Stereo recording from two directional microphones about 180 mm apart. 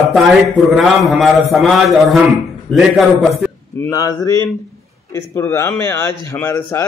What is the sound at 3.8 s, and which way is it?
Speech, 20° left (ahead or behind).